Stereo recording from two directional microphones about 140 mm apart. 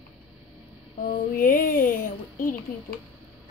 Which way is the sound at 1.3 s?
90° left.